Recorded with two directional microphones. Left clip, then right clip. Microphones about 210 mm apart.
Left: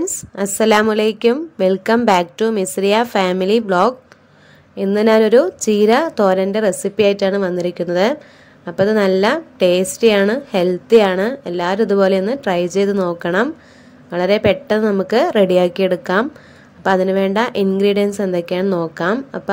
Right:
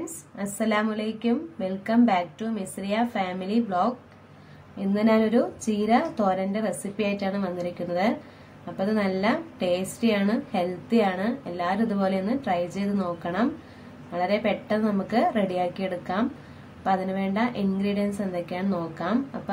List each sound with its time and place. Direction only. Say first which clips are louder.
0.4 s a woman's voice: left 12 dB; 55° left (ahead or behind)